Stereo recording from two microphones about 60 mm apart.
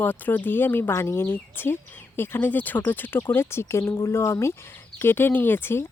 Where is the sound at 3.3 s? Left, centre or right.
Left.